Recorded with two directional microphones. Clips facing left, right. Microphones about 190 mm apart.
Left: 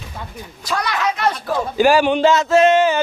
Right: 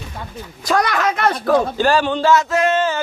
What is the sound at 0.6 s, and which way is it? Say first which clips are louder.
Speech: right 4 dB; 50° right (ahead or behind).